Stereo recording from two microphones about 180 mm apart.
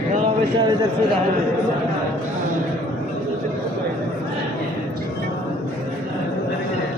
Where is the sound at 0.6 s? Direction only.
25° right (ahead or behind).